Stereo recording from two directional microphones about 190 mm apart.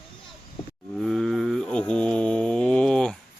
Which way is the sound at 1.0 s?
Centre (ahead or behind).